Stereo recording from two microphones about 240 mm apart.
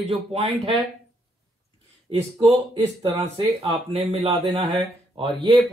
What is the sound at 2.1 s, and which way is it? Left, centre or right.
Speech, right.